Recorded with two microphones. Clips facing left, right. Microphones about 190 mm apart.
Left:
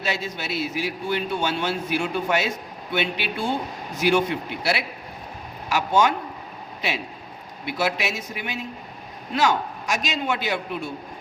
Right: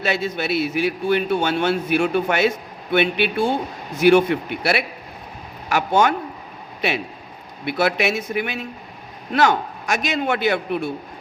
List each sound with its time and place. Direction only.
0.0 s a man's voice: 60° right (ahead or behind)
7.6 s a man's voice: 60° right (ahead or behind)